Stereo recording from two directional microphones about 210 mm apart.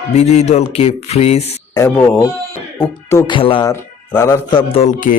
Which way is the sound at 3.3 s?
25° left (ahead or behind).